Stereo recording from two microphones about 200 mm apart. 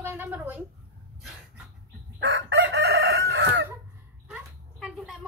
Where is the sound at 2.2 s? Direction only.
60° right (ahead or behind).